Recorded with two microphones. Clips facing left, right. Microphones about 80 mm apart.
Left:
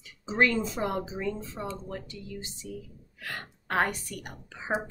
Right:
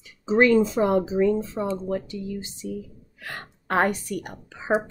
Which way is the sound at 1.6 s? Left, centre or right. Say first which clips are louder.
Right 9 dB; right.